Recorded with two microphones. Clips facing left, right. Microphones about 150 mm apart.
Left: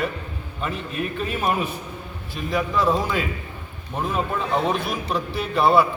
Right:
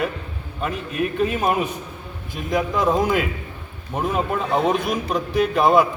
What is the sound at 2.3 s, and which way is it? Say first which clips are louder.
A man's voice: right 2 dB; 15° right (ahead or behind).